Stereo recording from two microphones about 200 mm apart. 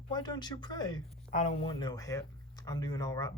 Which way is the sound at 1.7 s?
20° left (ahead or behind).